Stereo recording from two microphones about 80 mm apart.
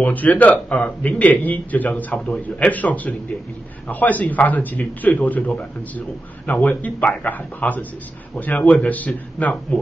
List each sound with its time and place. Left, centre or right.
0.0 s a man's voice: left